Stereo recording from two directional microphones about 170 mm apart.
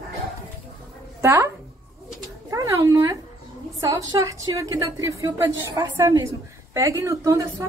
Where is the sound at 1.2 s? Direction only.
15° right (ahead or behind).